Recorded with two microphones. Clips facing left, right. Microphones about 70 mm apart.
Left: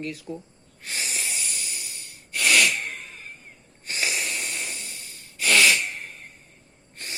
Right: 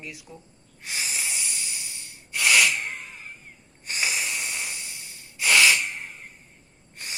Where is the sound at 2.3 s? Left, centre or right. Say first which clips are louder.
Even; centre.